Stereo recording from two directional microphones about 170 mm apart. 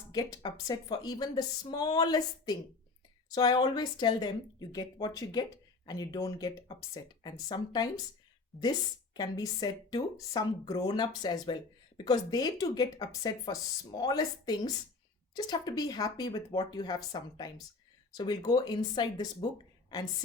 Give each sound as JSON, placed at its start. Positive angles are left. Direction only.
{"t": 0.1, "sound": "speech", "side_deg": 20}
{"t": 8.5, "sound": "a woman's voice", "side_deg": 0}
{"t": 9.1, "sound": "speech", "side_deg": 20}